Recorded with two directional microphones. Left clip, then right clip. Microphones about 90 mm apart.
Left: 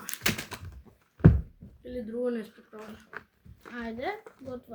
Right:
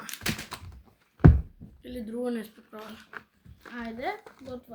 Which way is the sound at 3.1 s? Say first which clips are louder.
Left 1 dB; centre (ahead or behind).